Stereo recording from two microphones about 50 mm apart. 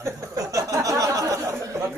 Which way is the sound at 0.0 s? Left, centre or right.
Right.